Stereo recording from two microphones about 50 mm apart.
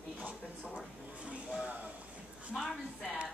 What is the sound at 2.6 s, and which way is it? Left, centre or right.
Speech, centre.